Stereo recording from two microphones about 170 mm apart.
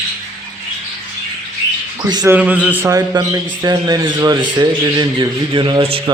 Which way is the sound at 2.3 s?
10° right (ahead or behind).